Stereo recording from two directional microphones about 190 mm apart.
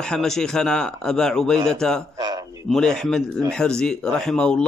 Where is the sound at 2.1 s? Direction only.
20° right (ahead or behind).